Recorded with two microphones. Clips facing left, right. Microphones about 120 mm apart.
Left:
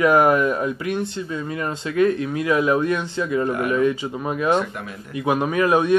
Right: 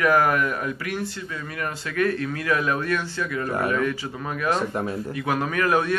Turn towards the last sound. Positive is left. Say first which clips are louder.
# left 5 dB
turn(degrees=20)  # may be behind; listen again after turning